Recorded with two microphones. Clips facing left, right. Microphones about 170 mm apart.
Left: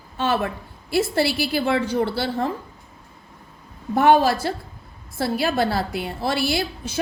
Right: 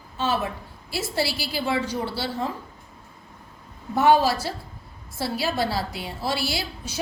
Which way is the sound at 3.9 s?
55° left (ahead or behind).